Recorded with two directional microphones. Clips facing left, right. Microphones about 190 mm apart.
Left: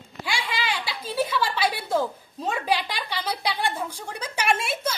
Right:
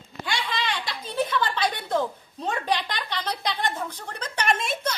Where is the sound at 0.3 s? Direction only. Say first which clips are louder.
Even; 10° left (ahead or behind).